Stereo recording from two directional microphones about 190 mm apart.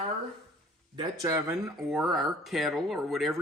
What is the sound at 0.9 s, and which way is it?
Cutlery, 20° right (ahead or behind).